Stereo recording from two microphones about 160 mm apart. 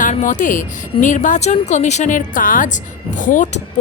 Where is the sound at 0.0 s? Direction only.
50° left (ahead or behind).